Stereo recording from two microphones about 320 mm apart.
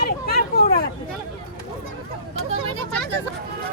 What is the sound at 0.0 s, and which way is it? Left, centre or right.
Hubbub, left.